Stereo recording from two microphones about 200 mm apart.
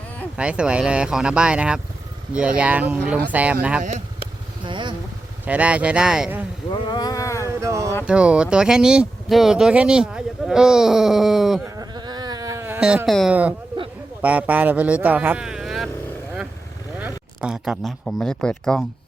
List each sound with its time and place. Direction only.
0.3 s speech: 5° right (ahead or behind)
4.6 s speech: 25° right (ahead or behind)
5.5 s speech: 5° right (ahead or behind)
6.7 s a sound: 20° left (ahead or behind)
7.4 s speech: 15° right (ahead or behind)
11.8 s a sound: 20° right (ahead or behind); by 13.5 s 5° right (ahead or behind)
14.2 s speech: 5° right (ahead or behind)
17.0 s speech: 5° right (ahead or behind)